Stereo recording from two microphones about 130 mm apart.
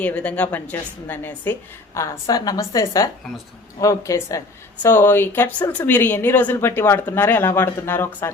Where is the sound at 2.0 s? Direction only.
30° left (ahead or behind).